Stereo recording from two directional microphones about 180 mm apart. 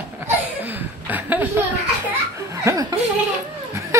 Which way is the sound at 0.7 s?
10° right (ahead or behind).